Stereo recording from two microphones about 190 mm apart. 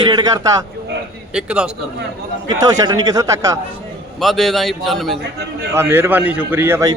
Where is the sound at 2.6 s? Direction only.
20° right (ahead or behind).